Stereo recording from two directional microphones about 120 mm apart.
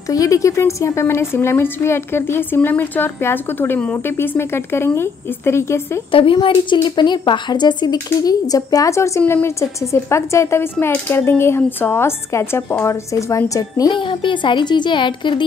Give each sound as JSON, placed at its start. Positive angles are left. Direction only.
{"t": 0.1, "sound": "a woman's voice", "side_deg": 30}
{"t": 6.1, "sound": "a woman's voice", "side_deg": 45}
{"t": 13.9, "sound": "speech", "side_deg": 45}